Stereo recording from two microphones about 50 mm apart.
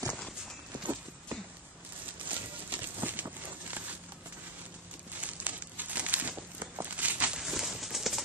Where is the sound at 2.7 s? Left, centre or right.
Right.